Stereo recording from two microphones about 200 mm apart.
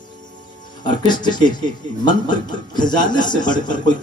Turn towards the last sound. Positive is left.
turn(degrees=20)  # may be behind; listen again after turning